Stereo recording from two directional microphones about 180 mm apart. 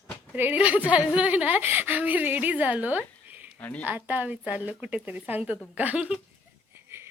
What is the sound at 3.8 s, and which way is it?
A woman's voice, 10° right (ahead or behind).